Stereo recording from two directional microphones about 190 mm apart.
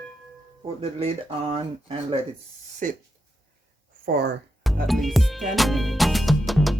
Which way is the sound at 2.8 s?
45° right (ahead or behind).